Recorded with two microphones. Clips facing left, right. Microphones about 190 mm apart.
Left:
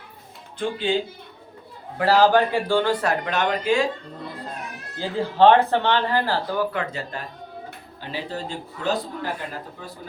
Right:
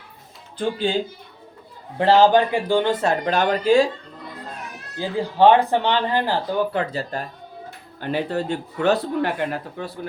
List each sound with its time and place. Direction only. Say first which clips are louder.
2.0 s speech: right 2 dB; 25° right (ahead or behind)
4.9 s speech: even; 15° right (ahead or behind)
6.7 s speech: right 4 dB; 35° right (ahead or behind)
8.0 s speech: right 7 dB; 60° right (ahead or behind)